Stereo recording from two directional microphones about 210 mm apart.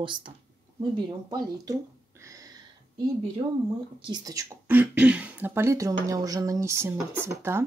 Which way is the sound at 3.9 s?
20° right (ahead or behind).